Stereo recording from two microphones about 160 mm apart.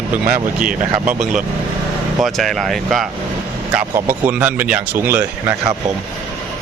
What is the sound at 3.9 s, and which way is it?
Speech, 10° right (ahead or behind).